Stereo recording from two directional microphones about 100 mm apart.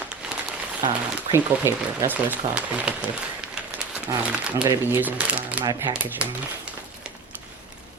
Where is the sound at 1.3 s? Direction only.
25° right (ahead or behind).